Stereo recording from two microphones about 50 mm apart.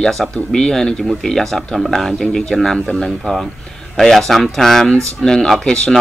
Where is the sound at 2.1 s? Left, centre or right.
Centre.